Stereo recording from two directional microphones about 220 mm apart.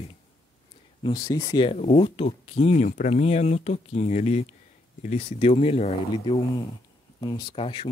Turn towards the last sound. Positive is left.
turn(degrees=25)  # may be behind; listen again after turning